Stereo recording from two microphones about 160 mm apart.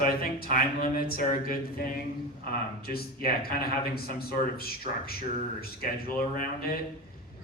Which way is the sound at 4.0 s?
70° left (ahead or behind).